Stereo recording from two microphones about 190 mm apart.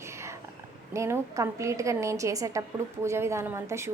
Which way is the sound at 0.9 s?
15° right (ahead or behind).